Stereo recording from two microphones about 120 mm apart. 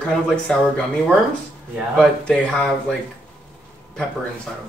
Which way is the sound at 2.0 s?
5° left (ahead or behind).